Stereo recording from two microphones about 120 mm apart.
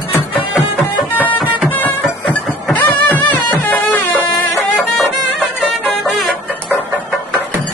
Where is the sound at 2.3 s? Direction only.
15° left (ahead or behind).